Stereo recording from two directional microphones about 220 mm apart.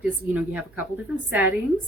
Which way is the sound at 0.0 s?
5° right (ahead or behind).